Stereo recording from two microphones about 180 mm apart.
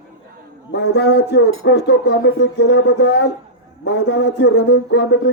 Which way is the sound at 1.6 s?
75° left (ahead or behind).